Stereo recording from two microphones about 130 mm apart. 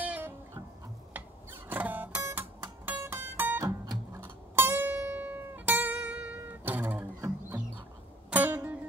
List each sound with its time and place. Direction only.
0.0 s guitar: 10° right (ahead or behind)
1.1 s music: 15° right (ahead or behind)